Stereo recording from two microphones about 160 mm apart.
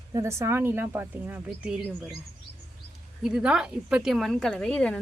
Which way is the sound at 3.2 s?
5° right (ahead or behind).